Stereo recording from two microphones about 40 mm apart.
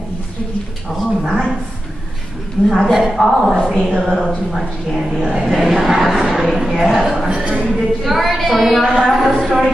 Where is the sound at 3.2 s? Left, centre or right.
Centre.